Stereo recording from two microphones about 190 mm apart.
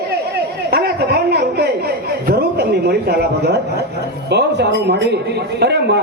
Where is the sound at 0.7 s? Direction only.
55° right (ahead or behind).